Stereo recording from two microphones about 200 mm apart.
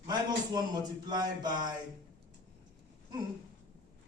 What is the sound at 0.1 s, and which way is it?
A man's voice, 20° right (ahead or behind).